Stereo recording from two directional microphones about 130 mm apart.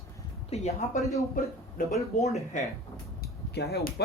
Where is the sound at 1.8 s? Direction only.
90° left.